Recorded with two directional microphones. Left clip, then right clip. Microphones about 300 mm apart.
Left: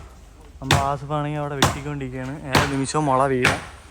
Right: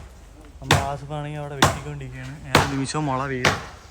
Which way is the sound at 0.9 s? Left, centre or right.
Right.